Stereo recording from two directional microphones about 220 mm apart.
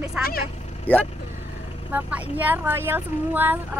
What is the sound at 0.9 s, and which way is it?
Speech, 10° left (ahead or behind).